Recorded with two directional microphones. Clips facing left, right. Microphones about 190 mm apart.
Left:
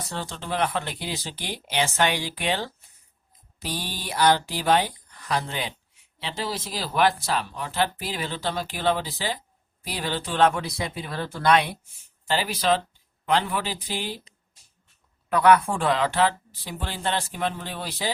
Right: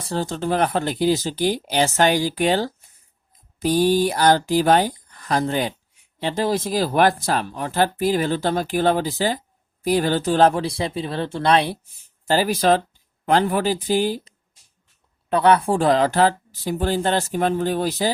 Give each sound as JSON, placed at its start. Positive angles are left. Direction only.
{"t": 0.0, "sound": "speech", "side_deg": -35}
{"t": 12.3, "sound": "speech", "side_deg": -45}
{"t": 15.3, "sound": "speech", "side_deg": -30}